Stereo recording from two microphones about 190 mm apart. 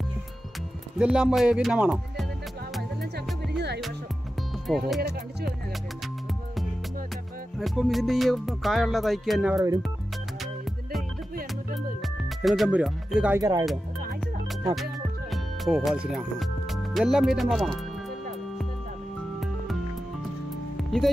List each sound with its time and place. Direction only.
0.9 s music: 5° right (ahead or behind)
3.5 s music: 60° right (ahead or behind)
4.6 s music: centre (ahead or behind)
7.5 s music: centre (ahead or behind)
12.0 s speech: centre (ahead or behind)
13.4 s speech: 20° right (ahead or behind)
14.8 s speech: centre (ahead or behind)
20.7 s music: centre (ahead or behind)